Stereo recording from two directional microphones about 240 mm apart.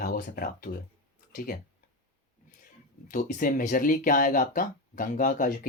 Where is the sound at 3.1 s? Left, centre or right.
Left.